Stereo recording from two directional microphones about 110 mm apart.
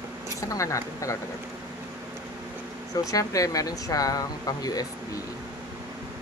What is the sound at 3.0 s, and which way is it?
Speech, 30° left (ahead or behind).